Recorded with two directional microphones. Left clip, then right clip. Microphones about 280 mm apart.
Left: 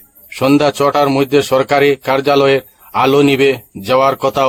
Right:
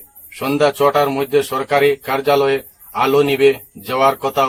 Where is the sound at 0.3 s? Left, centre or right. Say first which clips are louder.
Left 4 dB; left.